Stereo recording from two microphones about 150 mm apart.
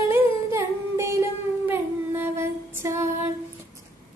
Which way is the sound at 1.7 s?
15° right (ahead or behind).